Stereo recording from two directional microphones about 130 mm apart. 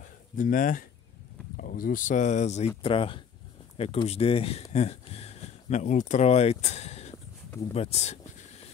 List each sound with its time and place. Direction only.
0.0 s a sound: 90° left
1.6 s speech: 90° left; by 2.7 s 60° left (ahead or behind)
2.8 s speech: 45° left (ahead or behind)